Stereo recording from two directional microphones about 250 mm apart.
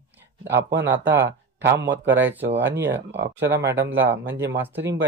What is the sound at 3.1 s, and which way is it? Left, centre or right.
Speech, right.